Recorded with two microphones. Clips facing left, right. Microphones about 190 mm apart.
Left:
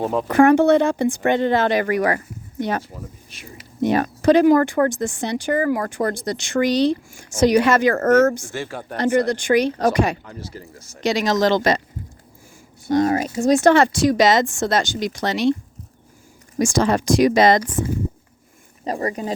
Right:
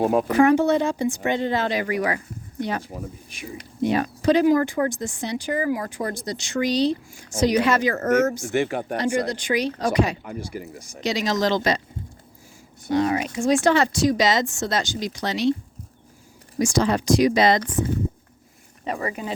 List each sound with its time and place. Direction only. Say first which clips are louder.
0.0 s speech: right 2 dB; 10° right (ahead or behind)
0.3 s speech: left 7 dB; 55° left (ahead or behind)
8.5 s speech: right 6 dB; 15° right (ahead or behind)
9.0 s speech: left 7 dB; 55° left (ahead or behind)
10.2 s speech: right 4 dB; 15° right (ahead or behind)
11.0 s speech: left 4 dB; 50° left (ahead or behind)
12.9 s speech: left 3 dB; 45° left (ahead or behind)
16.6 s speech: left 2 dB; 50° left (ahead or behind)
18.9 s speech: left 4 dB; 35° left (ahead or behind)